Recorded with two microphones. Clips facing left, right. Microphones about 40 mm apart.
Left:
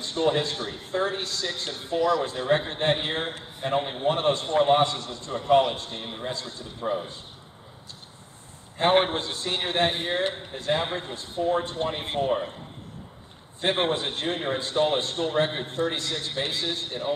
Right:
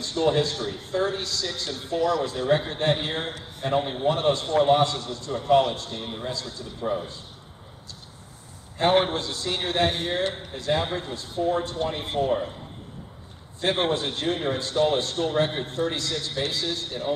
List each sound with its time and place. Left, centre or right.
0.0 s a man's voice: left
2.0 s a man's voice: centre
4.1 s a man's voice: left
6.8 s a man's voice: centre
8.7 s a man's voice: left
12.3 s a man's voice: centre
13.6 s a man's voice: left